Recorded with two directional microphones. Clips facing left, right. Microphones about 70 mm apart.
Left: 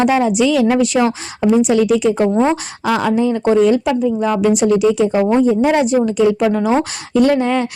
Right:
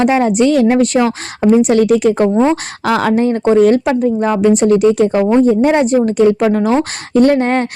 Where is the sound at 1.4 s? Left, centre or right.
Right.